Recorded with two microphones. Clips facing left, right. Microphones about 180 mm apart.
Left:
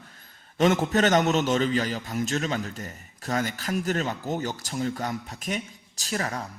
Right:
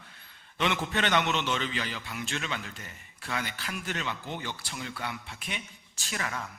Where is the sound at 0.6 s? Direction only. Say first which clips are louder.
Left 8 dB; 40° left (ahead or behind).